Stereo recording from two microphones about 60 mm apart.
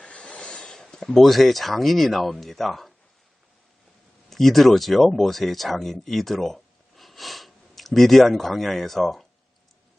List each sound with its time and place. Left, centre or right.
0.0 s speech: left; by 2.9 s centre
4.3 s speech: centre